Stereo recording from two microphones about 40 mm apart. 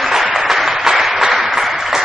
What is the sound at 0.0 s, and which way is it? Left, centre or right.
Applause, centre.